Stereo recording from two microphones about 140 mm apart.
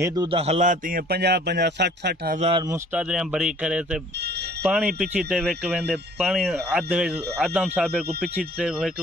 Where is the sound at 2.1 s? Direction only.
90° right.